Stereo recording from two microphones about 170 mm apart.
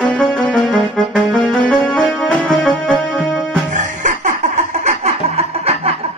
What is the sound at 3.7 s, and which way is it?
Music, 45° right (ahead or behind).